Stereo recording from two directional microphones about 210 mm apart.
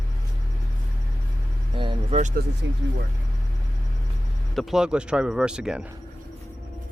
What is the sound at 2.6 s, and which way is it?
Speech, 60° right (ahead or behind).